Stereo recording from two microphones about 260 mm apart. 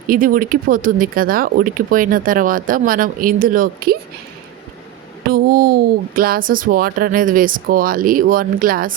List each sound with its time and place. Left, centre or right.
0.1 s speech: right
5.3 s speech: right